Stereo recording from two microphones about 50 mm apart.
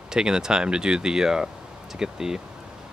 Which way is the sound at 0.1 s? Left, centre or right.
Centre.